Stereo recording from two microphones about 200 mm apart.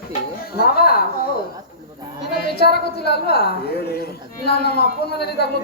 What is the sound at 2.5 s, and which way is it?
A woman's voice, 55° left (ahead or behind).